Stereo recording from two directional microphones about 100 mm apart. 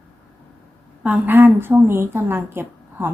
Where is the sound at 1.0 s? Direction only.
15° right (ahead or behind).